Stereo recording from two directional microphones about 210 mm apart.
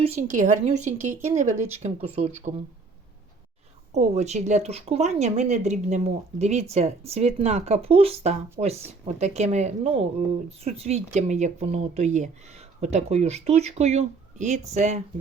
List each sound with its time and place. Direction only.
0.0 s speech: 35° right (ahead or behind)
3.9 s speech: 30° right (ahead or behind)